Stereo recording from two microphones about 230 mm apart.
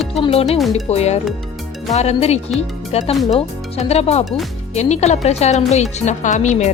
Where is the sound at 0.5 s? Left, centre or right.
Centre.